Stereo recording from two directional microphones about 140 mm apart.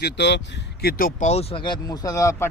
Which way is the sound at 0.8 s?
90° left.